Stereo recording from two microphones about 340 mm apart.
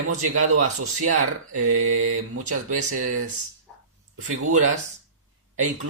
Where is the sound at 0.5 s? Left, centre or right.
Right.